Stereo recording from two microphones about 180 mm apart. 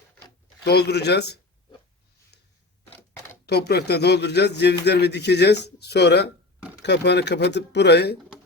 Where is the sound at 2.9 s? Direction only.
10° left (ahead or behind).